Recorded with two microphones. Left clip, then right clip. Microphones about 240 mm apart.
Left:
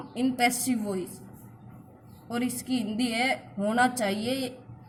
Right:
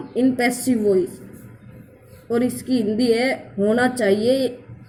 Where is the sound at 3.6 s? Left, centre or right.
Left.